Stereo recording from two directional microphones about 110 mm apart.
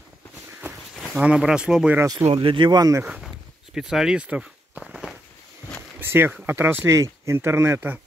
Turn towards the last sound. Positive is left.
turn(degrees=-20)  # may be behind; listen again after turning